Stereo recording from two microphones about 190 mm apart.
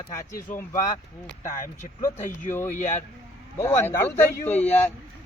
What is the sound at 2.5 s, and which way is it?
Speech, 10° left (ahead or behind).